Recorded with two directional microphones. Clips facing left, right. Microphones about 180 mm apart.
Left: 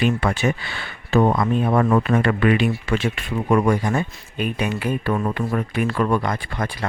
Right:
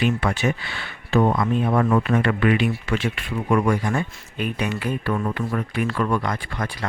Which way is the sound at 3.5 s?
25° left (ahead or behind).